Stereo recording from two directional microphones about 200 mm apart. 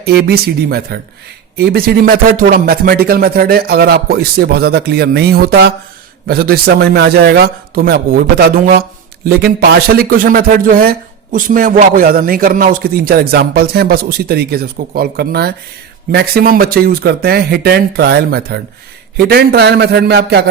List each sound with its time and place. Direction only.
0.0 s a man's voice: 50° right (ahead or behind)